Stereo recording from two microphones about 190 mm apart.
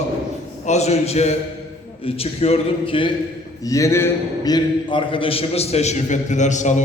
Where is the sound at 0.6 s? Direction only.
35° left (ahead or behind).